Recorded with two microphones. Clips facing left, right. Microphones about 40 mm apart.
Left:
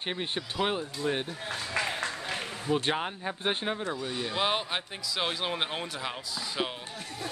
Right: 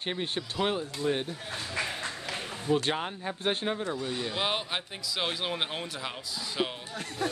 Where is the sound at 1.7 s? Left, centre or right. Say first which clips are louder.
Left 3 dB; left.